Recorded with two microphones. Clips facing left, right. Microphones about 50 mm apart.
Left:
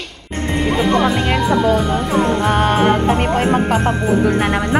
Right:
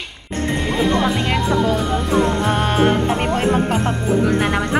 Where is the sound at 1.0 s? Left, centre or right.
Centre.